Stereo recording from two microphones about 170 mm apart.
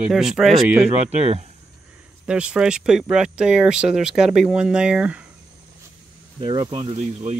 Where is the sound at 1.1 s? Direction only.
40° right (ahead or behind).